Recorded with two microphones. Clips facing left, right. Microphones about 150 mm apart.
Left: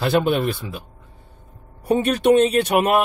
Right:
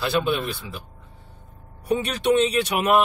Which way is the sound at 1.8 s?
50° left (ahead or behind).